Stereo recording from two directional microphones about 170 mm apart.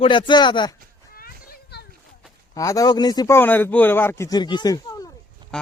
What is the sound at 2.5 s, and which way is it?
A man's voice, 20° left (ahead or behind).